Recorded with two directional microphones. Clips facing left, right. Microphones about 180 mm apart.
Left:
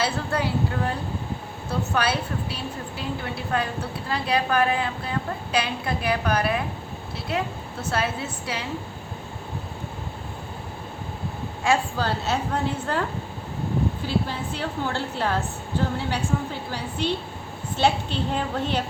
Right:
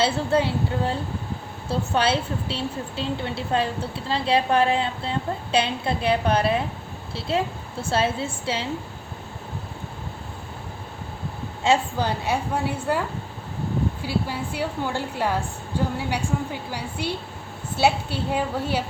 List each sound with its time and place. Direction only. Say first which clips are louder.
0.0 s a woman's voice: right 4 dB; 25° right (ahead or behind)
11.6 s a woman's voice: right 2 dB; 20° right (ahead or behind)
14.1 s a woman's voice: even; 10° right (ahead or behind)